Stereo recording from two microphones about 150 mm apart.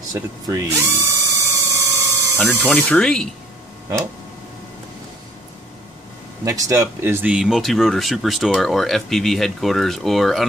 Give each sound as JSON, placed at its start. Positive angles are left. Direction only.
{"t": 0.1, "sound": "tools", "side_deg": -20}
{"t": 2.3, "sound": "speech", "side_deg": 10}
{"t": 6.4, "sound": "speech", "side_deg": -20}